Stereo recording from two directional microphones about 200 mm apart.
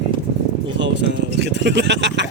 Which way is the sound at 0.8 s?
65° right (ahead or behind).